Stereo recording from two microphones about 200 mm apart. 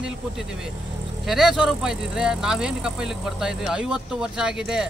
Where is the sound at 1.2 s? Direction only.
Centre (ahead or behind).